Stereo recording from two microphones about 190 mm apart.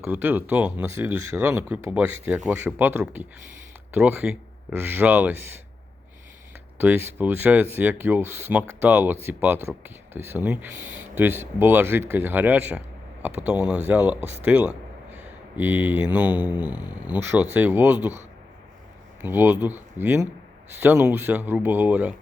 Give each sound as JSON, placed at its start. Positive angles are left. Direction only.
{"t": 0.0, "sound": "speech", "side_deg": -10}
{"t": 6.7, "sound": "speech", "side_deg": -10}
{"t": 19.2, "sound": "speech", "side_deg": -10}